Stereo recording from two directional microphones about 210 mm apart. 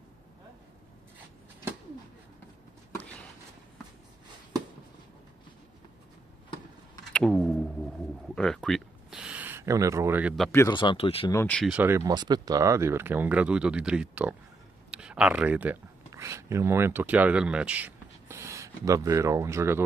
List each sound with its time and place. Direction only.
7.1 s a sound: 5° left (ahead or behind)
8.4 s speech: centre (ahead or behind)
10.5 s speech: 10° left (ahead or behind)
10.8 s speech: 25° left (ahead or behind)
11.3 s speech: 5° left (ahead or behind)
11.7 s speech: 10° right (ahead or behind)